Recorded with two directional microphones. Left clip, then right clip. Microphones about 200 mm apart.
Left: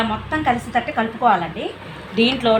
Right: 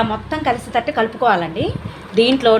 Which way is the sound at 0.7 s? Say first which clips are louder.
Right 3 dB; 70° right (ahead or behind).